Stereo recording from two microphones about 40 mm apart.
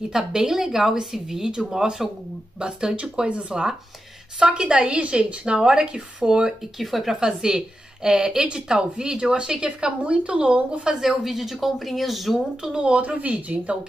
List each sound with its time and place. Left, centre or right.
0.1 s a woman's voice: centre
6.8 s speech: centre
7.2 s a woman's voice: centre
10.8 s speech: centre
11.1 s speech: centre
12.6 s speech: right
13.2 s speech: right